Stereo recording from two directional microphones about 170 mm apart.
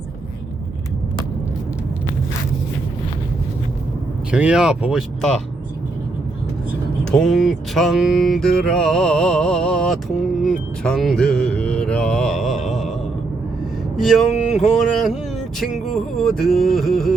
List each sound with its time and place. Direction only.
4.3 s music: 5° right (ahead or behind)
7.0 s music: centre (ahead or behind)
14.0 s music: centre (ahead or behind)